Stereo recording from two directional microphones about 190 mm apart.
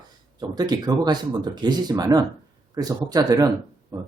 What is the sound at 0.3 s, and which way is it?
Speech, 20° right (ahead or behind).